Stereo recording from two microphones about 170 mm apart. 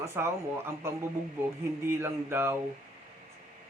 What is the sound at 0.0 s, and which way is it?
A man's voice, 15° right (ahead or behind).